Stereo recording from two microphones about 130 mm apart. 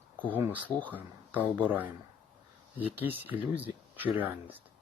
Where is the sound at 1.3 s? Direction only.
15° right (ahead or behind).